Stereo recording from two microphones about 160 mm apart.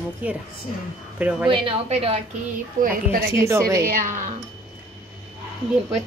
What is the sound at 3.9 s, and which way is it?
Speech, 55° right (ahead or behind).